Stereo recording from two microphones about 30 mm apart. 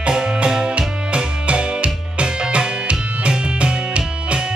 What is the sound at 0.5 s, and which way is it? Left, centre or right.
Music, right.